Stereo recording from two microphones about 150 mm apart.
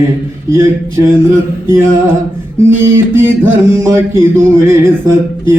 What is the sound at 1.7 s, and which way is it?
Music, 20° right (ahead or behind).